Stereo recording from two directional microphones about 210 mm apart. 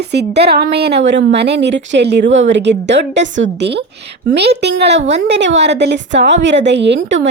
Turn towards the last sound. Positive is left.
turn(degrees=-60)  # may be behind; listen again after turning